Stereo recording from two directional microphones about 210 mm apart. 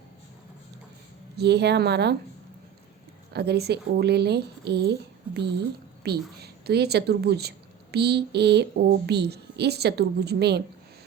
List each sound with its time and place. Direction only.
1.4 s a woman's voice: 50° right (ahead or behind)
3.3 s a woman's voice: 50° right (ahead or behind)